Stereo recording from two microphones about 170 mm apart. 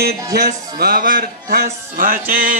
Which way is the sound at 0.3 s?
60° right (ahead or behind).